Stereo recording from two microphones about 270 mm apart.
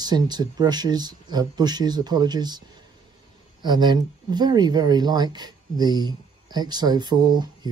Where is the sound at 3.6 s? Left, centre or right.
Centre.